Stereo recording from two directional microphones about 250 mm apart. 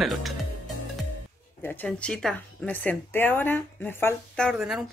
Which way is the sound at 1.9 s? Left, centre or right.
Centre.